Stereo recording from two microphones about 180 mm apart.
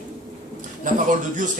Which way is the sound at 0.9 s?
45° right (ahead or behind).